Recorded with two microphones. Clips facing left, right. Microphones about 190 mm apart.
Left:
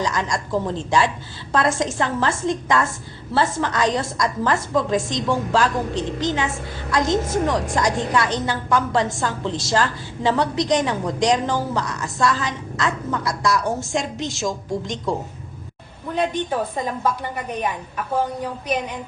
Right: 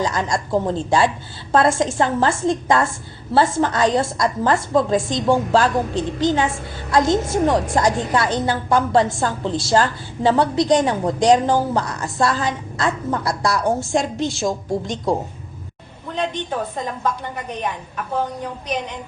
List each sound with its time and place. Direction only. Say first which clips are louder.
0.0 s a woman's voice: right 2 dB; 30° right (ahead or behind)
6.9 s a woman's voice: right 3 dB; 30° right (ahead or behind)
16.0 s a woman's voice: left 2 dB; 5° left (ahead or behind)